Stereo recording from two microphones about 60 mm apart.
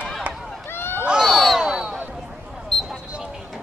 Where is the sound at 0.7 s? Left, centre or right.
Left.